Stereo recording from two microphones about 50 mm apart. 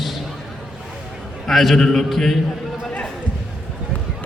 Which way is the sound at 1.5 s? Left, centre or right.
Centre.